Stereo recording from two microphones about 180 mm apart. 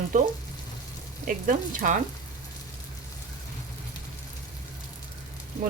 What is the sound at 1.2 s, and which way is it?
Speech, 50° right (ahead or behind).